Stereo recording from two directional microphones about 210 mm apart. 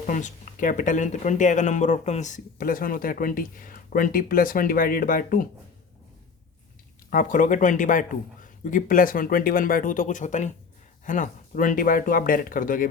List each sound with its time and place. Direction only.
0.1 s speech: 35° left (ahead or behind)
7.1 s speech: 40° left (ahead or behind)